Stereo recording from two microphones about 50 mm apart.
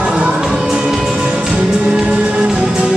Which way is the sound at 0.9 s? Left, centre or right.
Centre.